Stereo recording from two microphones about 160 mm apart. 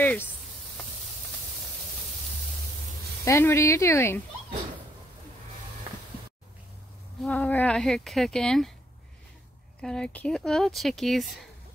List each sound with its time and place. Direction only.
0.0 s a sound: 10° left (ahead or behind)
3.3 s speech: 15° left (ahead or behind)
7.2 s speech: 10° left (ahead or behind)
9.8 s speech: 5° left (ahead or behind)